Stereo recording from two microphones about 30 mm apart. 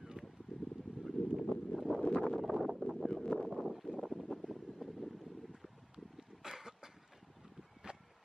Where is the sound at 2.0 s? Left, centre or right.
Left.